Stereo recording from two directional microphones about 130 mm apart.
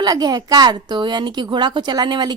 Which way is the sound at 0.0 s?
30° right (ahead or behind).